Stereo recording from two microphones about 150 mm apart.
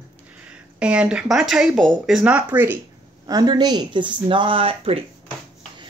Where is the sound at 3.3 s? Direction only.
30° right (ahead or behind).